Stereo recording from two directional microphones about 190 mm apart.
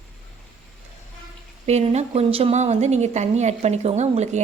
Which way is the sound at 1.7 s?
35° right (ahead or behind).